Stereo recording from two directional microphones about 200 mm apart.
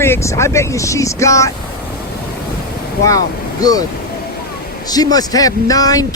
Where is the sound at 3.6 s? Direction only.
20° left (ahead or behind).